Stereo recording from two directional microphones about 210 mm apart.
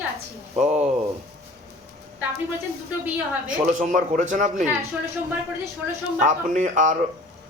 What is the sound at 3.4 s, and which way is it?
Speech, 40° right (ahead or behind).